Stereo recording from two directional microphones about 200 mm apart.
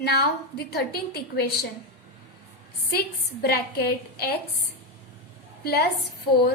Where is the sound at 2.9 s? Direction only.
55° left (ahead or behind).